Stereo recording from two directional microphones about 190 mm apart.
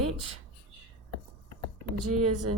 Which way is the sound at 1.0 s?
90° right.